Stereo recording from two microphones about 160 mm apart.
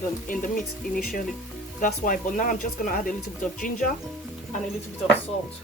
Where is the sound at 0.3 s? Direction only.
55° left (ahead or behind).